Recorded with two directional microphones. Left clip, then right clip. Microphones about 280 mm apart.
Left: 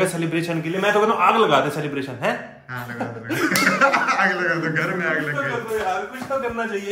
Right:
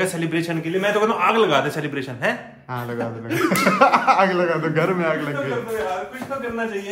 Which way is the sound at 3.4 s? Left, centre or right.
Centre.